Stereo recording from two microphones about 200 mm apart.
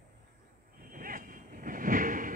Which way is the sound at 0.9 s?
45° right (ahead or behind).